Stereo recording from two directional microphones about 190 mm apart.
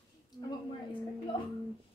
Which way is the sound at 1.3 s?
25° left (ahead or behind).